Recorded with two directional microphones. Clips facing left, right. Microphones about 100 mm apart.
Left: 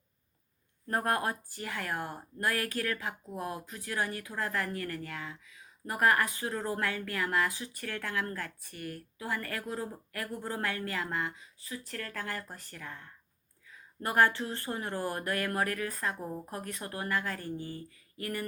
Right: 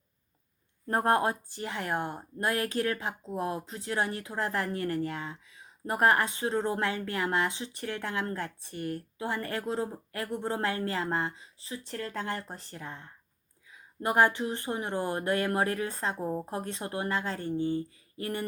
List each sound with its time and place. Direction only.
0.9 s speech: 25° right (ahead or behind)